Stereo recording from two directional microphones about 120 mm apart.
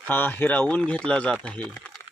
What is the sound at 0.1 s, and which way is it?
Speech, 15° left (ahead or behind).